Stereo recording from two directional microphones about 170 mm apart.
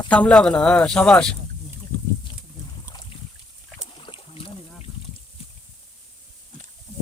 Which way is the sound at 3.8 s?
30° left (ahead or behind).